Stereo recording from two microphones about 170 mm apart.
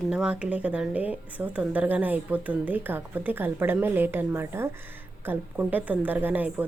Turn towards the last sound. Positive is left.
turn(degrees=-10)  # may be behind; listen again after turning